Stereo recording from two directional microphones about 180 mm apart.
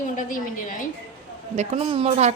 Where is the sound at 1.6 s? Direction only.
35° right (ahead or behind).